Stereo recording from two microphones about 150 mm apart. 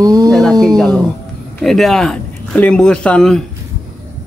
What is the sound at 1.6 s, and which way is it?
Speech, centre (ahead or behind).